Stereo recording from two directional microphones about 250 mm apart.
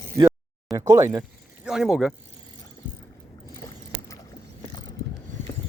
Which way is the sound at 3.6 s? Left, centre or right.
Centre.